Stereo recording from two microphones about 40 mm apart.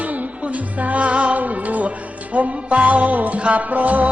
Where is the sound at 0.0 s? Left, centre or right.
Right.